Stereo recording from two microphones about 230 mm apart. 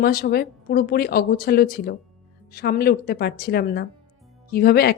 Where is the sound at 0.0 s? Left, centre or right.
Left.